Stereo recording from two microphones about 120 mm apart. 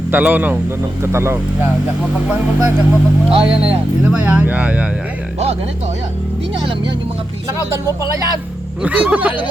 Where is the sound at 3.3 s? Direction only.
45° right (ahead or behind).